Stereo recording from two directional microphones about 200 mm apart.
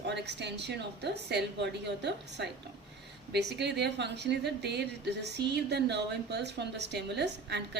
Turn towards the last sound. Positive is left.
turn(degrees=-55)  # may be behind; listen again after turning